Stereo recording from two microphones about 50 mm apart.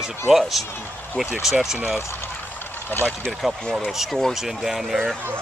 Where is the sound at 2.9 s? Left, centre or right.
Left.